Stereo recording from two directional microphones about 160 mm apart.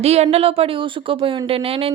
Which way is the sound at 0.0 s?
40° right (ahead or behind).